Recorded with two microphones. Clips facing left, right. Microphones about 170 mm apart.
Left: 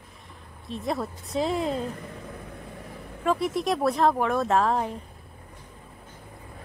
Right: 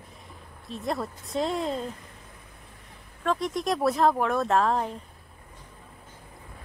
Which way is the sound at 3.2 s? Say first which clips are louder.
Left 2 dB; 5° left (ahead or behind).